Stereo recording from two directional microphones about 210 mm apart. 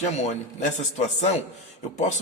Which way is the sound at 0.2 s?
35° left (ahead or behind).